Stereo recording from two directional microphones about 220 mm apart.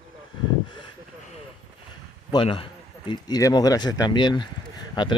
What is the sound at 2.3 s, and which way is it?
Speech, 25° left (ahead or behind).